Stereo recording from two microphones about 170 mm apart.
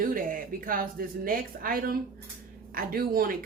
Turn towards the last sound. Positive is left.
turn(degrees=-60)  # may be behind; listen again after turning